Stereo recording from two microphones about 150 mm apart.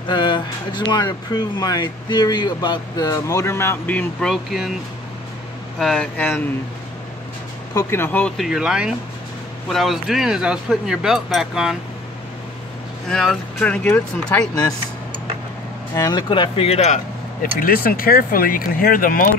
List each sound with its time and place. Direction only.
0.0 s speech: 30° left (ahead or behind); by 4.7 s centre (ahead or behind)
5.8 s speech: 5° left (ahead or behind)
7.7 s speech: 15° left (ahead or behind)
8.4 s speech: 5° right (ahead or behind)
13.1 s speech: 5° left (ahead or behind)
15.9 s speech: 25° left (ahead or behind); by 19.2 s 70° left (ahead or behind)